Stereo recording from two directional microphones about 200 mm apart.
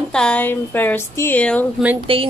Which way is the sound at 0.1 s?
5° left (ahead or behind).